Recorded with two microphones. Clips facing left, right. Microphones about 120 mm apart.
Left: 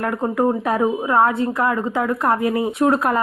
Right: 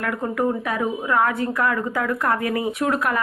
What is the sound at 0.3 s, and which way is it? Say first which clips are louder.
A woman's voice: left 5 dB; 30° left (ahead or behind).